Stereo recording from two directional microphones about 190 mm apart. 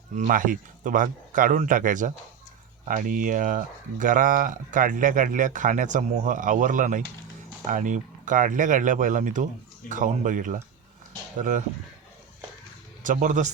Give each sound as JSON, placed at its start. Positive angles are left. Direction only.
{"t": 0.2, "sound": "speech", "side_deg": -45}
{"t": 13.0, "sound": "speech", "side_deg": -45}